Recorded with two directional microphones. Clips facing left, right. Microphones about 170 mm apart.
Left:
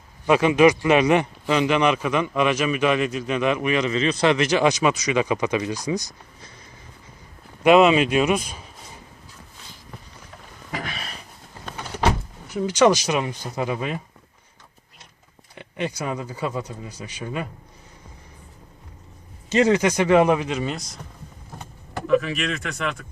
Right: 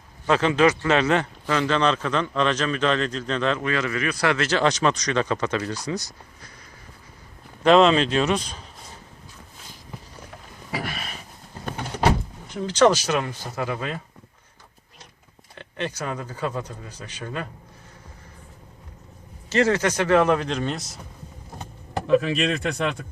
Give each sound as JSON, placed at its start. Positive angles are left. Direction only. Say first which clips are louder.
{"t": 0.3, "sound": "a man's voice", "louder": "left 3 dB", "side_deg": 15}
{"t": 7.6, "sound": "a man's voice", "louder": "left 1 dB", "side_deg": 10}
{"t": 10.7, "sound": "a sound", "louder": "right 1 dB", "side_deg": -5}
{"t": 12.6, "sound": "a man's voice", "louder": "left 1 dB", "side_deg": 10}
{"t": 15.5, "sound": "a man's voice", "louder": "left 2 dB", "side_deg": 10}
{"t": 19.5, "sound": "a man's voice", "louder": "left 2 dB", "side_deg": 15}
{"t": 22.0, "sound": "speech", "louder": "right 1 dB", "side_deg": -30}